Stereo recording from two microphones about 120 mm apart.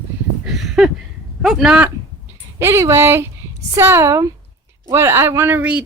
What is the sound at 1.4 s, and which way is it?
Speech, 5° right (ahead or behind).